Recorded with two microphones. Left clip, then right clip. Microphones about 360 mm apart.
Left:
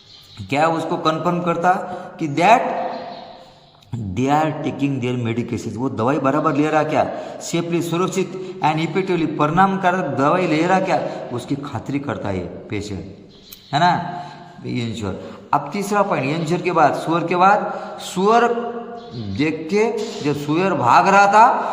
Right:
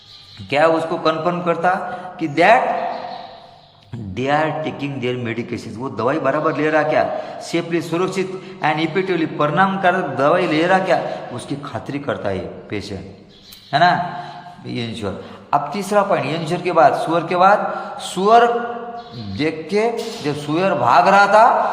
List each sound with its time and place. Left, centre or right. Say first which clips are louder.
0.5 s a man's voice: right 3 dB; centre
4.1 s a man's voice: even; centre